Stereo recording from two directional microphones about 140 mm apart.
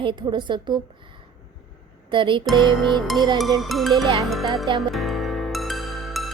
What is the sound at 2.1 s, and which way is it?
Speech, 35° right (ahead or behind).